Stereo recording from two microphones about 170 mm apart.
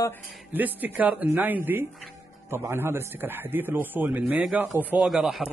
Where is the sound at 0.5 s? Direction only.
10° right (ahead or behind).